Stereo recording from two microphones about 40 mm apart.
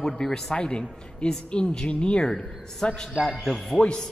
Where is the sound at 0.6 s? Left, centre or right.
Left.